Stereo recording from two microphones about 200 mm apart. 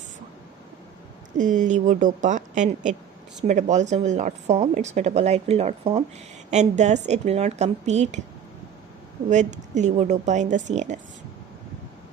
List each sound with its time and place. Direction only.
1.4 s speech: 40° right (ahead or behind)
9.3 s speech: 35° right (ahead or behind)